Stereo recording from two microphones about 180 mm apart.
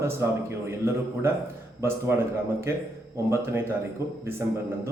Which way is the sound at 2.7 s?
15° right (ahead or behind).